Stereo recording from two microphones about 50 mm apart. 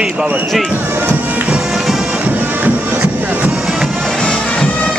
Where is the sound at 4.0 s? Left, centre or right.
Centre.